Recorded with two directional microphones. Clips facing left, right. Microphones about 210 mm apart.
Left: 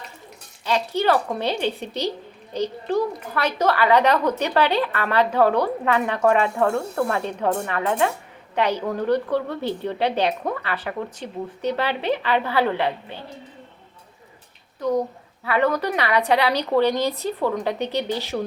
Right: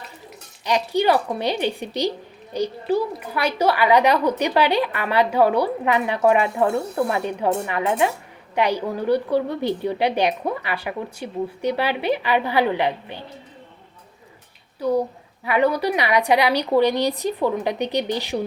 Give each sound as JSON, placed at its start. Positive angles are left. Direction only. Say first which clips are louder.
{"t": 0.6, "sound": "a woman's voice", "louder": "right 2 dB", "side_deg": -15}
{"t": 14.8, "sound": "a woman's voice", "louder": "right 1 dB", "side_deg": -10}